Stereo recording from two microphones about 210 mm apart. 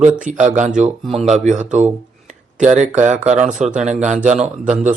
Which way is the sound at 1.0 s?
Centre (ahead or behind).